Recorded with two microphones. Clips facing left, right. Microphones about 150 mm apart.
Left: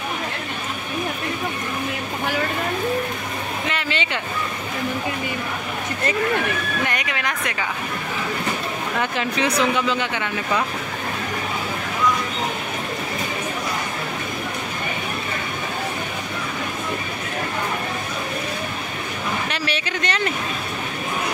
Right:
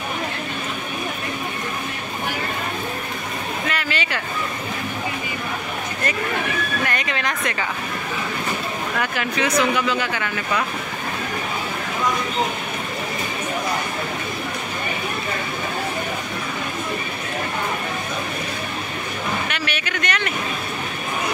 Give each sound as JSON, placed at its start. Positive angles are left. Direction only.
{"t": 3.6, "sound": "a sound", "side_deg": 25}
{"t": 6.9, "sound": "speech", "side_deg": 10}
{"t": 9.0, "sound": "speech", "side_deg": 25}
{"t": 19.5, "sound": "speech", "side_deg": 30}